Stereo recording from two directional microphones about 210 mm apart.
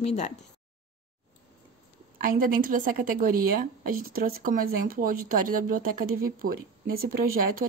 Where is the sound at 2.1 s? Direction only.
40° right (ahead or behind).